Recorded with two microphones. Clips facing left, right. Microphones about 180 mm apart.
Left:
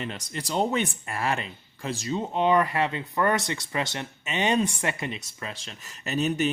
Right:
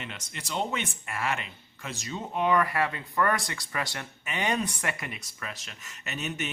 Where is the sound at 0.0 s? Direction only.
35° left (ahead or behind).